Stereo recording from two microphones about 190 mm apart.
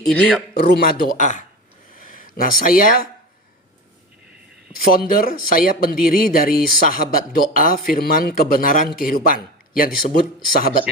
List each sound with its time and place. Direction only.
0.1 s speech: 5° left (ahead or behind)
0.5 s speech: 60° left (ahead or behind)
4.9 s speech: 50° left (ahead or behind)